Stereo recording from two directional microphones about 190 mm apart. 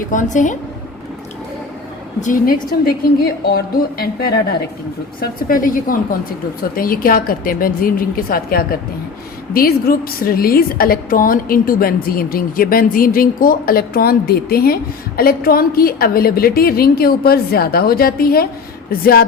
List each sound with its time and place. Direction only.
0.1 s a woman's voice: 40° left (ahead or behind)
2.2 s a woman's voice: 45° left (ahead or behind)